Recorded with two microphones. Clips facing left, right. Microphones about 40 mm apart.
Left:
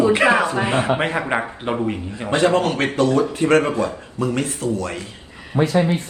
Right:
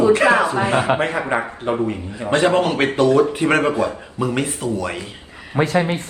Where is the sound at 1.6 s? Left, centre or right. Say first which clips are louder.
Right 2 dB; left.